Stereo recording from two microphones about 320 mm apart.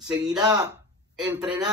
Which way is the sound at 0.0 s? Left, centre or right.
Centre.